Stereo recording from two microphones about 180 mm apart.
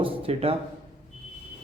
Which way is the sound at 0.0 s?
30° right (ahead or behind).